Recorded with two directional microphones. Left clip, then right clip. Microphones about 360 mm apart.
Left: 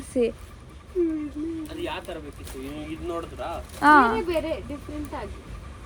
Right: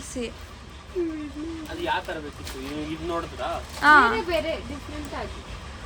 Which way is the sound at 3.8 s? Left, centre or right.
Centre.